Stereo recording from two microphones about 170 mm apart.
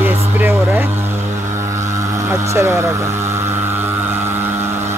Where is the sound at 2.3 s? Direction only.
15° right (ahead or behind).